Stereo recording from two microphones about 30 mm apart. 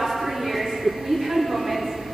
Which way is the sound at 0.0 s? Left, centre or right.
Centre.